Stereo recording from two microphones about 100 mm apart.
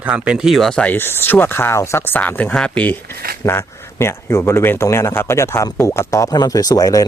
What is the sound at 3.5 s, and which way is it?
Speech, 25° left (ahead or behind).